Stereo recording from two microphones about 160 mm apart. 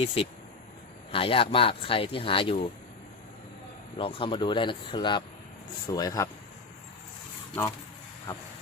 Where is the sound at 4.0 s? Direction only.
35° left (ahead or behind).